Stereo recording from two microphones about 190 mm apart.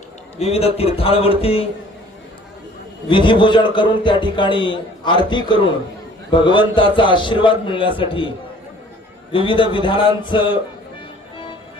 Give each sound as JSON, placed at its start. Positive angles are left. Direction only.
{"t": 0.3, "sound": "speech", "side_deg": 35}
{"t": 3.1, "sound": "a man's voice", "side_deg": 25}
{"t": 9.3, "sound": "a man's voice", "side_deg": 25}